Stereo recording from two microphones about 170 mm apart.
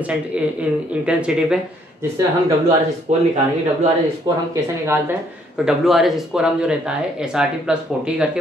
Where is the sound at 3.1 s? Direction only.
40° right (ahead or behind).